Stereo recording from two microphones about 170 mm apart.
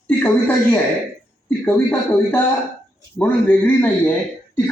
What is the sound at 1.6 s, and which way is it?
A man's voice, 10° left (ahead or behind).